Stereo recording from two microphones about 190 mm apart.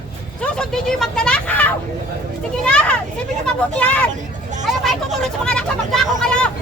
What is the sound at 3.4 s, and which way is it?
Speech, 5° left (ahead or behind).